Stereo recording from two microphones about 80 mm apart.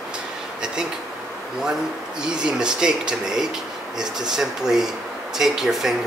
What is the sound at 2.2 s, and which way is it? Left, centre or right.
Speech, centre.